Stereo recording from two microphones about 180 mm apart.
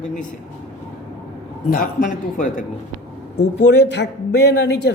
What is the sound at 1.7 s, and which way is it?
Speech, 45° left (ahead or behind).